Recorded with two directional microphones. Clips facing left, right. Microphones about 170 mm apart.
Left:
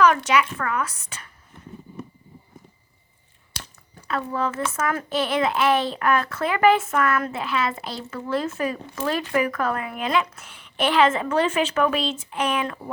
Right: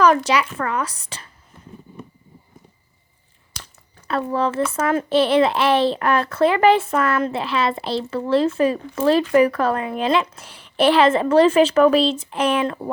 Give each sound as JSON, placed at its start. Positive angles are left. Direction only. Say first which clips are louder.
{"t": 0.0, "sound": "a child's voice", "louder": "right 2 dB", "side_deg": -35}
{"t": 4.1, "sound": "a child's voice", "louder": "right 5 dB", "side_deg": -30}